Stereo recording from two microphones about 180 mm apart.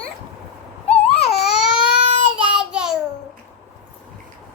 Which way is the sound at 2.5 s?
5° right (ahead or behind).